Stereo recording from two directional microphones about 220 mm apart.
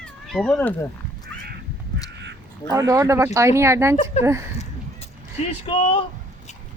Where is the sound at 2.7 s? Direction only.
15° right (ahead or behind).